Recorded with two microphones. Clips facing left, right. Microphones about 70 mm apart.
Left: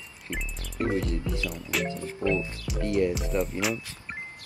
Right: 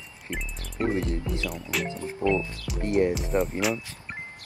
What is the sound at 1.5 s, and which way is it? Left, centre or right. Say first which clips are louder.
Speech: even; centre.